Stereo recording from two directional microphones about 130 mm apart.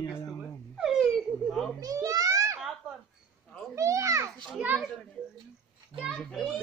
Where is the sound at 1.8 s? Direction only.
25° right (ahead or behind).